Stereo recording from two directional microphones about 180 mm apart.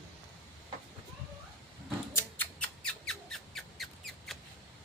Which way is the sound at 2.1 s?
10° left (ahead or behind).